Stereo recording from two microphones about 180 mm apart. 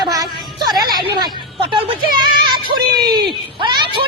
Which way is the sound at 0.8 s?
20° right (ahead or behind).